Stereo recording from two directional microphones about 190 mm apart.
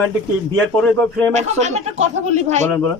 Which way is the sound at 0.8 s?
10° left (ahead or behind).